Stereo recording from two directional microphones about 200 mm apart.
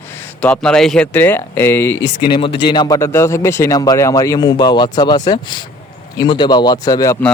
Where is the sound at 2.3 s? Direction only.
25° left (ahead or behind).